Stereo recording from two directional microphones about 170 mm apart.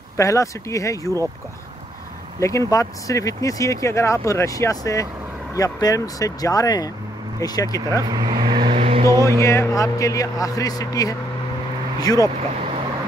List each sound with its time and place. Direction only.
0.2 s speech: 20° left (ahead or behind)
2.4 s speech: 20° left (ahead or behind)
8.1 s vehicle: 25° right (ahead or behind)
9.4 s speech: 15° left (ahead or behind)